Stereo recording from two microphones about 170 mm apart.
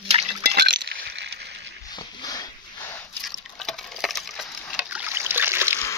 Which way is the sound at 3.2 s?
Centre (ahead or behind).